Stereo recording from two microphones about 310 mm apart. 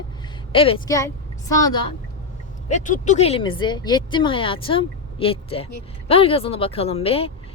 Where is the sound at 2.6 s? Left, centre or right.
Left.